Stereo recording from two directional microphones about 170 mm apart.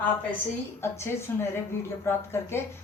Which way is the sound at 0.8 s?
15° left (ahead or behind).